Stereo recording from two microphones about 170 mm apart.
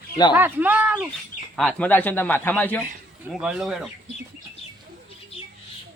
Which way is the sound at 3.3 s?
5° right (ahead or behind).